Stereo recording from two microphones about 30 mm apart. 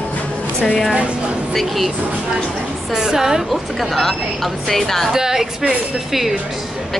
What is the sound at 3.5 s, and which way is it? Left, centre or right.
A woman's voice, centre.